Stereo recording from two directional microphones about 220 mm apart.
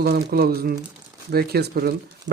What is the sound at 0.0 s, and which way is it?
Speech, 45° right (ahead or behind).